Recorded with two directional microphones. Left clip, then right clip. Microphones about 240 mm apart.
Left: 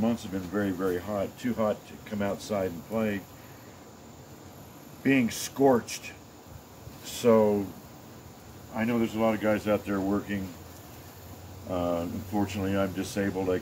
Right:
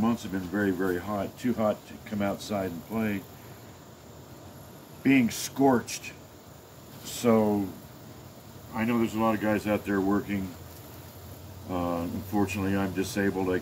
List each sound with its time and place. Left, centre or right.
0.0 s speech: centre
5.0 s speech: centre
7.2 s speech: centre
8.7 s speech: centre
11.7 s speech: centre